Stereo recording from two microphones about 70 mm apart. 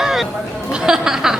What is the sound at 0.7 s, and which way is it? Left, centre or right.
Speech, centre.